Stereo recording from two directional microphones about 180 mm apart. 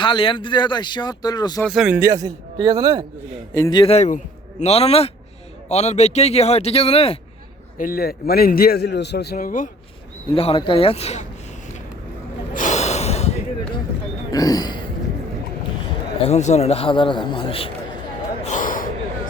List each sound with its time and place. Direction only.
0.0 s speech: 30° left (ahead or behind)
1.6 s speech: centre (ahead or behind)
2.0 s a man's voice: 15° right (ahead or behind)
3.5 s speech: 20° left (ahead or behind)
3.9 s a man's voice: 40° left (ahead or behind)
7.8 s a man's voice: 55° left (ahead or behind)
10.3 s a man's voice: 30° left (ahead or behind)
12.5 s snort: 40° left (ahead or behind)
14.3 s speech: 20° left (ahead or behind)
16.2 s a man's voice: 40° left (ahead or behind)
18.4 s a sound: 45° left (ahead or behind)